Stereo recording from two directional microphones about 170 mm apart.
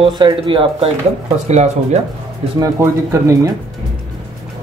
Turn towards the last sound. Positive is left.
turn(degrees=-15)  # may be behind; listen again after turning